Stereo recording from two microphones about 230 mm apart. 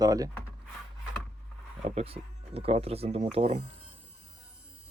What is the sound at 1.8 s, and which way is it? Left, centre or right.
Speech, right.